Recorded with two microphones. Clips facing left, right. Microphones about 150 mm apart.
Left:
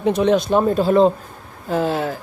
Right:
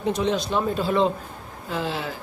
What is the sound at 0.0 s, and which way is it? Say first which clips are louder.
A man's voice: left 7 dB; 60° left (ahead or behind).